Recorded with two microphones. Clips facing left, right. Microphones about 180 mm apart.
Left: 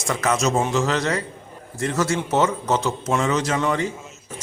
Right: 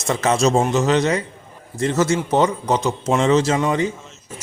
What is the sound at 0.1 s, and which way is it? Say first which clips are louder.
Speech: right 4 dB; 25° right (ahead or behind).